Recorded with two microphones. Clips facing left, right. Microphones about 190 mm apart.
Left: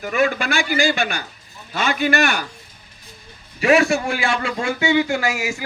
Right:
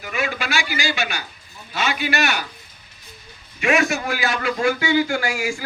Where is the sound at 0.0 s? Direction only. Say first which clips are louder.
Left 6 dB; 45° left (ahead or behind).